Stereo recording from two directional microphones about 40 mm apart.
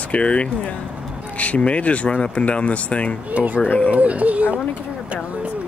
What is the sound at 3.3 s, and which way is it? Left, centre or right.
Speech, right.